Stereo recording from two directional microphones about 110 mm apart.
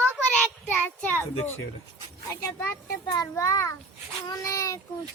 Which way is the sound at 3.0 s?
35° left (ahead or behind).